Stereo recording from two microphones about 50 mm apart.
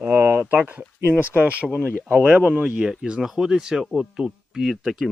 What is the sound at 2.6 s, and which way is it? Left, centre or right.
A man's voice, centre.